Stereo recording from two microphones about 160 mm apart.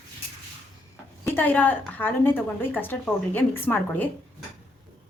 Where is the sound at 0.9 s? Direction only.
15° left (ahead or behind).